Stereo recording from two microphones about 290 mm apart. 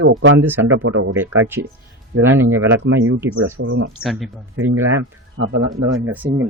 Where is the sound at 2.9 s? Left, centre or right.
Right.